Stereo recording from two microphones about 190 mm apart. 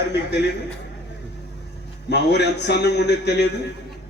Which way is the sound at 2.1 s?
65° left (ahead or behind).